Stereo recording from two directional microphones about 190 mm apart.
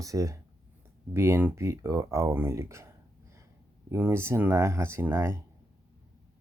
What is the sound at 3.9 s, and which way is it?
Speech, 15° right (ahead or behind).